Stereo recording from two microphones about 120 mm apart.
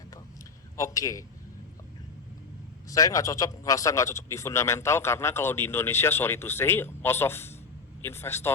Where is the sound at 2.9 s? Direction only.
30° left (ahead or behind).